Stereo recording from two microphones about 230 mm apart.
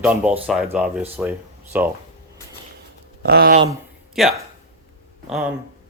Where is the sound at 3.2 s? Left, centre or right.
Right.